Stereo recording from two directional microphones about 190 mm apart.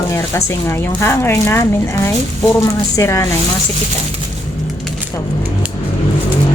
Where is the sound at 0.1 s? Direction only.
15° left (ahead or behind).